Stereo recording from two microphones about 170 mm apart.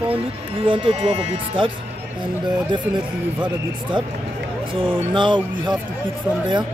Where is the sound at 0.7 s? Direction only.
35° right (ahead or behind).